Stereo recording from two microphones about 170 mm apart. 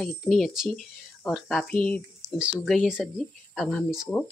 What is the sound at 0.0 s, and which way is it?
Speech, centre (ahead or behind).